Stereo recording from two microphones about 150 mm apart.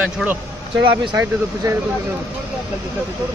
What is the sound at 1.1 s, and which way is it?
Speech, 20° right (ahead or behind).